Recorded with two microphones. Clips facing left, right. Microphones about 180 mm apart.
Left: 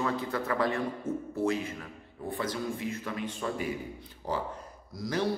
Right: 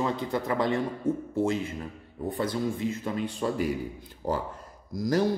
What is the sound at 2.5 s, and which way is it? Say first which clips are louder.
Speech: right 5 dB; 25° right (ahead or behind).